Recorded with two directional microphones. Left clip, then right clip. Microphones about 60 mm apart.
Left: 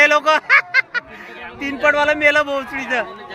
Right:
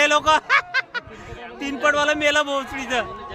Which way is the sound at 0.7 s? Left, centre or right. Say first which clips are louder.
Left 7 dB; left.